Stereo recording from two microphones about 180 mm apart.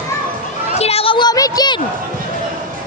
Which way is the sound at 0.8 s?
35° left (ahead or behind).